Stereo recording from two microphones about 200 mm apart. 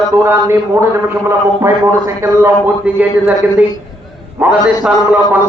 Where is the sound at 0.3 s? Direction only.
15° right (ahead or behind).